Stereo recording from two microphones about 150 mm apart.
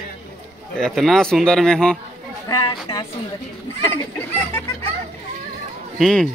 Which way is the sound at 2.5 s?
25° left (ahead or behind).